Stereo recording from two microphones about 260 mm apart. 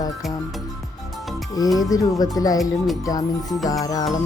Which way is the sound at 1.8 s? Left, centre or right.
Centre.